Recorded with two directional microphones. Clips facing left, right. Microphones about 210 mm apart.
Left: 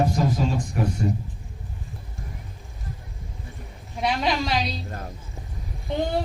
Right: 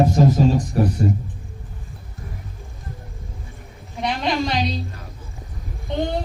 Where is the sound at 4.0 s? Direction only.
5° left (ahead or behind).